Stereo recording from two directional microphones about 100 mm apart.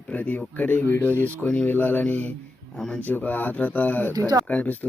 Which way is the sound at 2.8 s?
5° left (ahead or behind).